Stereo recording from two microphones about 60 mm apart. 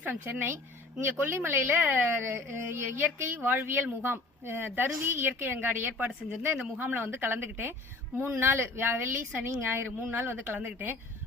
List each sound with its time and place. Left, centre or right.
0.0 s speech: right